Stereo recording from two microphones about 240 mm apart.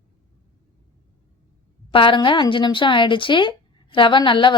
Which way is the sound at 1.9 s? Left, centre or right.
Left.